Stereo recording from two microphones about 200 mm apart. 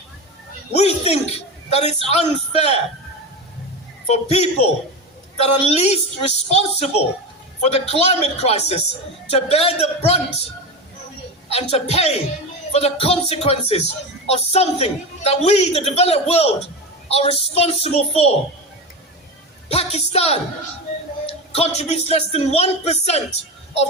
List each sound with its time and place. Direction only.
0.7 s a woman's voice: 30° left (ahead or behind)
4.1 s speech: 30° left (ahead or behind)
11.5 s speech: 30° left (ahead or behind)
19.6 s speech: 30° left (ahead or behind)